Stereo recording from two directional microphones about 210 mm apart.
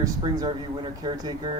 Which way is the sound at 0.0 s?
20° right (ahead or behind).